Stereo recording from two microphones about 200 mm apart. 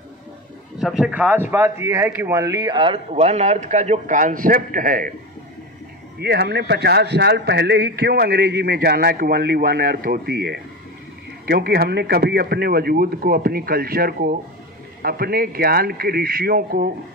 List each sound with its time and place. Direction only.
0.7 s speech: centre (ahead or behind); by 5.1 s 45° right (ahead or behind)
6.1 s a man's voice: 55° right (ahead or behind)